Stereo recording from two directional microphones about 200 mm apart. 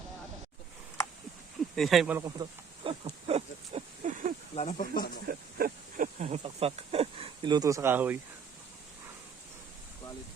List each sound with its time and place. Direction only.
1.7 s speech: centre (ahead or behind)
2.2 s a sound: 25° right (ahead or behind)
4.5 s speech: 35° left (ahead or behind)
5.3 s speech: 50° right (ahead or behind); by 8.2 s 10° right (ahead or behind)